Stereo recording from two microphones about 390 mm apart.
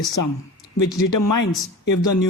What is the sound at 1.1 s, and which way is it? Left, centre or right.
Speech, left.